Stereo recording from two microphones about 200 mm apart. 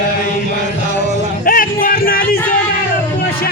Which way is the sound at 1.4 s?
45° left (ahead or behind).